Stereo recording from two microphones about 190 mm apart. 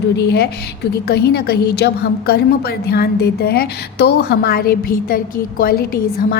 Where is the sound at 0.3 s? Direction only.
60° left (ahead or behind).